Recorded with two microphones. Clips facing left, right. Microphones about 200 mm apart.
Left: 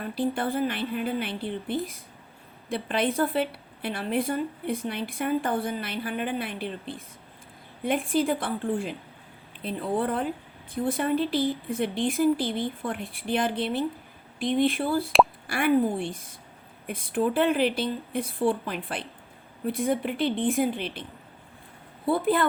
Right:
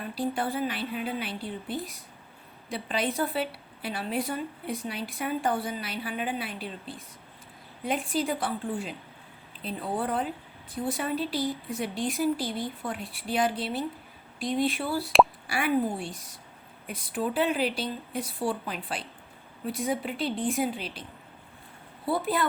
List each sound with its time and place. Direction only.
0.0 s a woman's voice: 50° left (ahead or behind)
2.6 s a woman's voice: 55° left (ahead or behind)
9.6 s a woman's voice: 50° left (ahead or behind)
13.6 s a woman's voice: centre (ahead or behind)
14.6 s a woman's voice: 50° left (ahead or behind)
22.0 s a woman's voice: 50° left (ahead or behind)